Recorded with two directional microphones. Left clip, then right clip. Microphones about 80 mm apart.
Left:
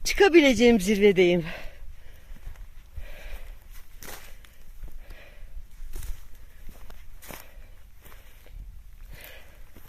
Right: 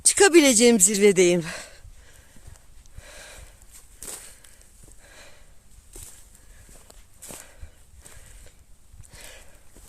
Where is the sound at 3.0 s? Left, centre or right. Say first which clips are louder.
Right 3 dB; right.